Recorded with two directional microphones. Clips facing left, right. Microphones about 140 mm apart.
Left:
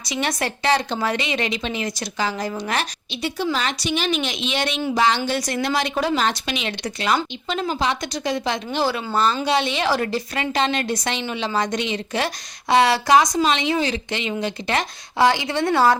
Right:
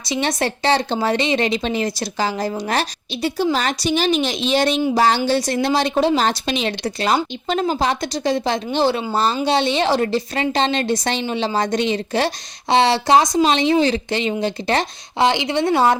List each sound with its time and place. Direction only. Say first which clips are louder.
0.0 s a woman's voice: right 4 dB; 30° right (ahead or behind)
15.2 s speech: right 1 dB; 20° right (ahead or behind)